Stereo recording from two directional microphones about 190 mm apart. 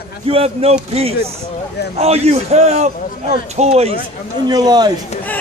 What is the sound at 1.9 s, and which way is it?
A man's voice, 35° right (ahead or behind).